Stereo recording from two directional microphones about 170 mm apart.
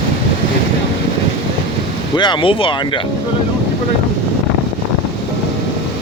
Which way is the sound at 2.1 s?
25° left (ahead or behind).